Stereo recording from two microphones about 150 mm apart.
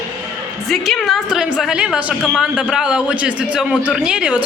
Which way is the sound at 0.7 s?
Centre (ahead or behind).